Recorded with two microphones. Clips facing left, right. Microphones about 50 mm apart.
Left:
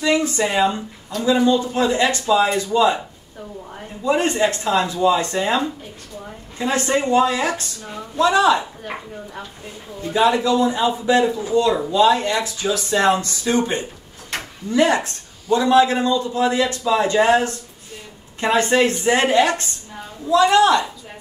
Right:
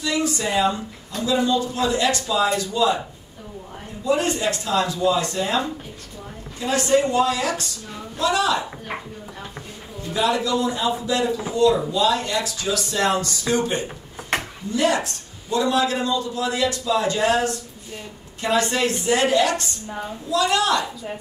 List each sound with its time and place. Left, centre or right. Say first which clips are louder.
0.0 s a sound: left 4 dB; left
0.5 s a man's voice: left 2 dB; left
4.0 s a man's voice: left 3 dB; left
10.0 s a man's voice: left 5 dB; left
14.3 s a sound: right 4 dB; right
14.7 s a man's voice: left 4 dB; left